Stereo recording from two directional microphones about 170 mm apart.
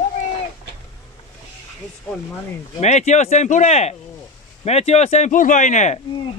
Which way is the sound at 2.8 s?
40° left (ahead or behind).